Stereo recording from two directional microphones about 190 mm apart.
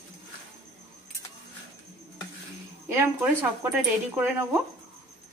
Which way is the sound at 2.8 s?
10° right (ahead or behind).